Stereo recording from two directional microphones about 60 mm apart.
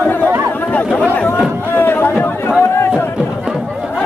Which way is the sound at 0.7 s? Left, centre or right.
Left.